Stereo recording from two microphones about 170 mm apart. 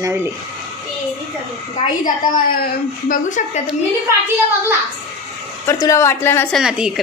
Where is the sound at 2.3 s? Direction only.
55° left (ahead or behind).